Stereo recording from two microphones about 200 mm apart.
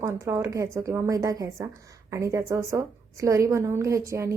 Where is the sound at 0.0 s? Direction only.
15° right (ahead or behind).